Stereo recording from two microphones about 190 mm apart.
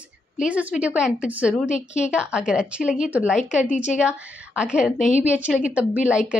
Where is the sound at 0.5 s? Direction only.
5° right (ahead or behind).